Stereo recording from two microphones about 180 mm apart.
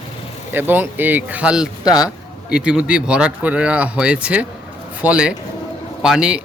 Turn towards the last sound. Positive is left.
turn(degrees=-5)  # may be behind; listen again after turning